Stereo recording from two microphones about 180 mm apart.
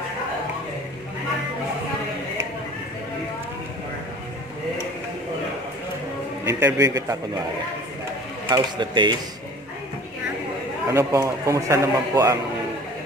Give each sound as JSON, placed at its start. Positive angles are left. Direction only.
{"t": 6.4, "sound": "a man's voice", "side_deg": -15}
{"t": 8.5, "sound": "speech", "side_deg": -25}
{"t": 10.9, "sound": "a man's voice", "side_deg": -15}